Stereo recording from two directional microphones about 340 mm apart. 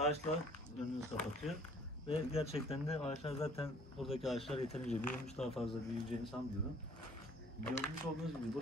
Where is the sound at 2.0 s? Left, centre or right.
Centre.